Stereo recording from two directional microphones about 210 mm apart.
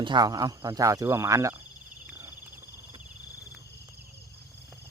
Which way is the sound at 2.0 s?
10° right (ahead or behind).